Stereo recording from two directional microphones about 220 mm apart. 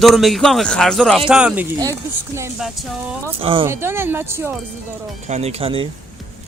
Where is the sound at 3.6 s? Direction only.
10° right (ahead or behind).